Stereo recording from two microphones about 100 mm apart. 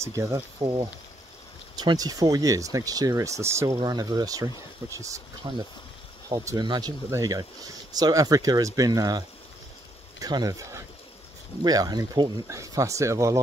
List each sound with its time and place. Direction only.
0.0 s speech: 30° right (ahead or behind)
0.6 s speech: 45° right (ahead or behind)
1.8 s speech: 40° right (ahead or behind)
3.8 s speech: 45° right (ahead or behind)
5.4 s speech: 45° right (ahead or behind)
6.2 s speech: 35° right (ahead or behind)
6.6 s speech: 45° right (ahead or behind)
7.1 s speech: 35° right (ahead or behind)
10.2 s speech: 40° right (ahead or behind)